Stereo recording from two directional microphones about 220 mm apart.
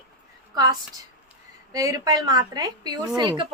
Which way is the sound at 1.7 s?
15° right (ahead or behind).